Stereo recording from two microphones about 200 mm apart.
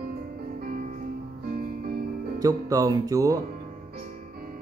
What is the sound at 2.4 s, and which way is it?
Speech, 15° right (ahead or behind).